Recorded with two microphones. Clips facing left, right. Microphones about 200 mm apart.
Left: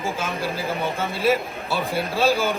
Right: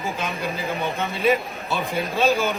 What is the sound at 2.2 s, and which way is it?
Speech, 10° left (ahead or behind).